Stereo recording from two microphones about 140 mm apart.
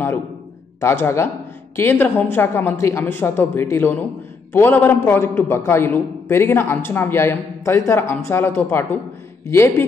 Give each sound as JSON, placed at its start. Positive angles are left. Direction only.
{"t": 0.7, "sound": "a man's voice", "side_deg": 20}